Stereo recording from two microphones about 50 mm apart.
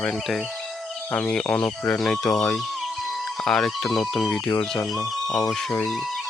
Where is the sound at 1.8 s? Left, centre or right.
Centre.